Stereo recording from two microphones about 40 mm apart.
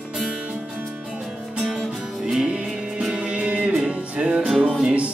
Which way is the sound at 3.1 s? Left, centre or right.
Right.